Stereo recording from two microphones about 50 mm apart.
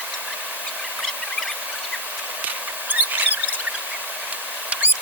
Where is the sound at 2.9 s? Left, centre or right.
Right.